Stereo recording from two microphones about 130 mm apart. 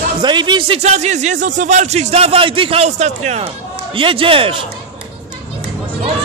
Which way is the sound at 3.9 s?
40° right (ahead or behind).